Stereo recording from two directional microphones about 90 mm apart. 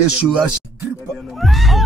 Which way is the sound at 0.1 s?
10° right (ahead or behind).